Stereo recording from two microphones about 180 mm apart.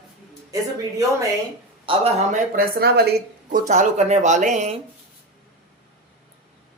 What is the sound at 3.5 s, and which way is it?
Speech, 40° right (ahead or behind).